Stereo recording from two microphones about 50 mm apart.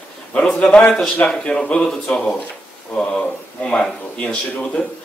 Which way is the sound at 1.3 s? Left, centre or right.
Centre.